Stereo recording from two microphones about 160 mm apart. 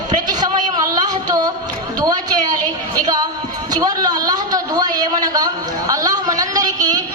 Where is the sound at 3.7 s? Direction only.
25° right (ahead or behind).